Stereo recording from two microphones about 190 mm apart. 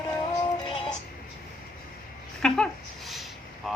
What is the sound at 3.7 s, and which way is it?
Vehicle, centre (ahead or behind).